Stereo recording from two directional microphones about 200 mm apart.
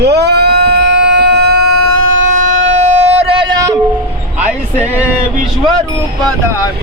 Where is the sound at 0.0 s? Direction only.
55° right (ahead or behind).